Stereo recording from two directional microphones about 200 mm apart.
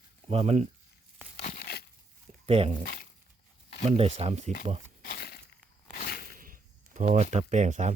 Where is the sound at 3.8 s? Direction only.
30° right (ahead or behind).